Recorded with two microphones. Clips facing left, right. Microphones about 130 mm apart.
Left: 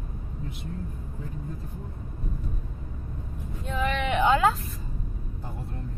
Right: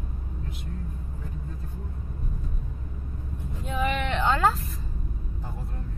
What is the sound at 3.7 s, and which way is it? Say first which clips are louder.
Vehicle: right 1 dB; 10° right (ahead or behind).